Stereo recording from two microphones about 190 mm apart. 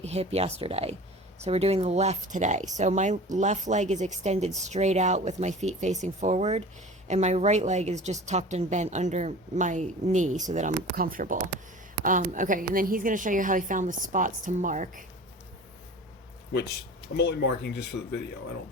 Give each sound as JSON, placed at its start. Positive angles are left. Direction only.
{"t": 0.0, "sound": "a woman's voice", "side_deg": -35}
{"t": 17.2, "sound": "speech", "side_deg": 60}